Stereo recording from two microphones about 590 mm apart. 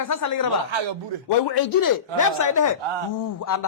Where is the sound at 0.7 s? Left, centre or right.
Right.